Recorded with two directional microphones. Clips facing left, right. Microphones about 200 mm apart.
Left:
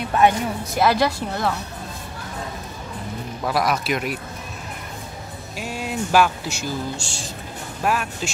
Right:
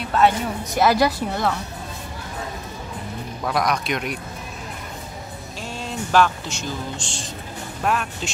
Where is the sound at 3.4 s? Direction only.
5° left (ahead or behind).